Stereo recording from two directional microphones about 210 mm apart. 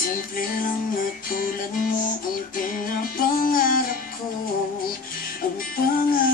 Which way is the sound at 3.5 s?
40° left (ahead or behind).